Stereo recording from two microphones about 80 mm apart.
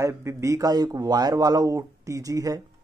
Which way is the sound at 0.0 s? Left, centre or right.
Right.